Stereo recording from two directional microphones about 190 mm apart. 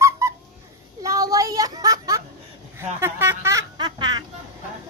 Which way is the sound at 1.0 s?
15° right (ahead or behind).